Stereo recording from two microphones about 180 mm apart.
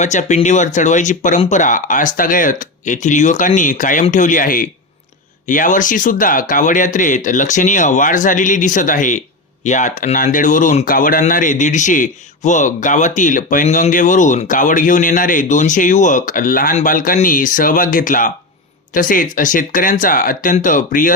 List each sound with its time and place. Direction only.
0.0 s speech: 40° left (ahead or behind)